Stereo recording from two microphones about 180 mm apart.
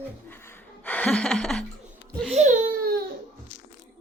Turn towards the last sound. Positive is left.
turn(degrees=-55)  # may be behind; listen again after turning